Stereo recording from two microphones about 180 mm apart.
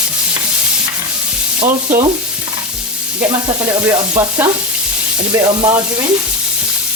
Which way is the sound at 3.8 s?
15° right (ahead or behind).